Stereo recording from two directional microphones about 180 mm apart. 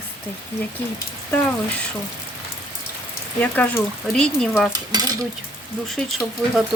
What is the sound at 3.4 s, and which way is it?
Speech, 10° left (ahead or behind).